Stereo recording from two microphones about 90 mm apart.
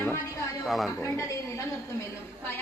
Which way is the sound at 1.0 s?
35° left (ahead or behind).